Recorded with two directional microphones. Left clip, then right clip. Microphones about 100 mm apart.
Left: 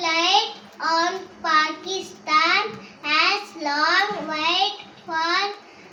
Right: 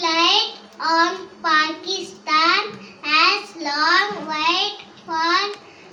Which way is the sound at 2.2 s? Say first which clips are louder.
Right 2 dB; 20° right (ahead or behind).